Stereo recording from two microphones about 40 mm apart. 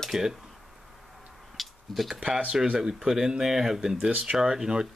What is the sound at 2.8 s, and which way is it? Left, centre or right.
Speech, centre.